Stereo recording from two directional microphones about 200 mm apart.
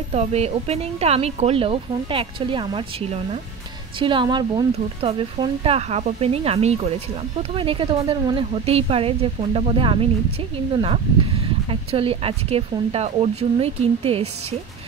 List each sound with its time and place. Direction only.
0.1 s a woman's voice: 30° right (ahead or behind)